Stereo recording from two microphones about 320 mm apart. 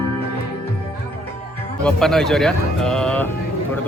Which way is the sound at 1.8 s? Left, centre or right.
Centre.